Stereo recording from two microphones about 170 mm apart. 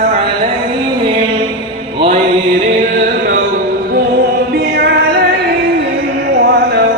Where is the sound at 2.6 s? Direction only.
45° right (ahead or behind).